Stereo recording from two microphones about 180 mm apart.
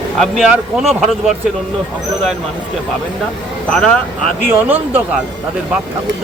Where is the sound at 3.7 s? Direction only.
5° left (ahead or behind).